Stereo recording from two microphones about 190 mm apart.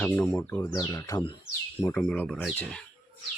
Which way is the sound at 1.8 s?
10° left (ahead or behind).